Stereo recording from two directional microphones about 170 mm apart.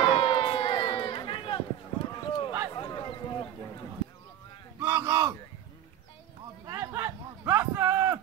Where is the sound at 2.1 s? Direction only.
30° left (ahead or behind).